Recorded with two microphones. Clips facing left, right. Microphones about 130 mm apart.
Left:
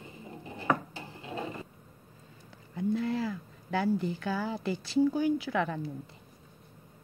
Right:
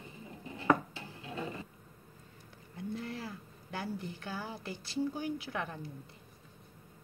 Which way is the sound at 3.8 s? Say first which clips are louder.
Left 10 dB; 90° left.